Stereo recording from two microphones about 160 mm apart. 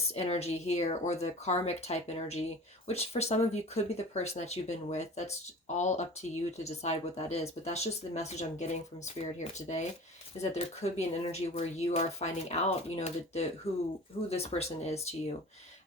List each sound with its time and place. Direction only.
0.1 s speech: 40° left (ahead or behind)